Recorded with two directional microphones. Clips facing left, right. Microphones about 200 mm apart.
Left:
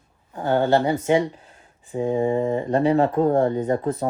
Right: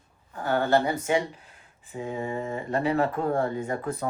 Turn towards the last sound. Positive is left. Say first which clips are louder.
# left 8 dB
turn(degrees=35)  # may be behind; listen again after turning